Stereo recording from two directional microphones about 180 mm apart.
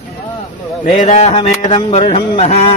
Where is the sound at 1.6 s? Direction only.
30° left (ahead or behind).